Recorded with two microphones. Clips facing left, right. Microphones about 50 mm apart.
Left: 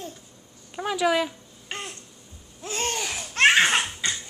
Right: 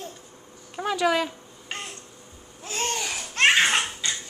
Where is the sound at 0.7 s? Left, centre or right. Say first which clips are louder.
Even; centre.